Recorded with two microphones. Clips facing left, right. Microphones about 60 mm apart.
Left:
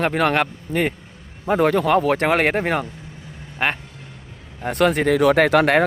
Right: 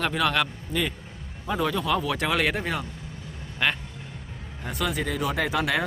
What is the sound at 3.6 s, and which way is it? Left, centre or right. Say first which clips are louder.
Speech: left 3 dB; left.